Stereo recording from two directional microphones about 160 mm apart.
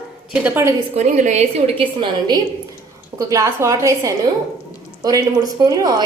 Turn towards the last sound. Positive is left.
turn(degrees=-20)  # may be behind; listen again after turning